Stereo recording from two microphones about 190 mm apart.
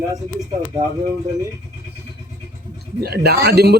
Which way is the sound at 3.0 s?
55° right (ahead or behind).